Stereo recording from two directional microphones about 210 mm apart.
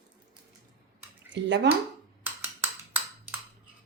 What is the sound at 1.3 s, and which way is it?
Speech, 55° right (ahead or behind).